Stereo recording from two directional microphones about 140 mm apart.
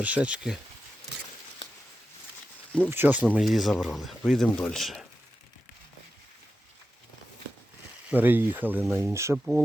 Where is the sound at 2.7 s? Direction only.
15° right (ahead or behind).